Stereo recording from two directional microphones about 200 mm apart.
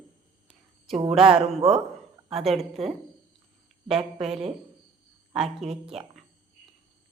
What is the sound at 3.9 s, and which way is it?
Speech, centre (ahead or behind).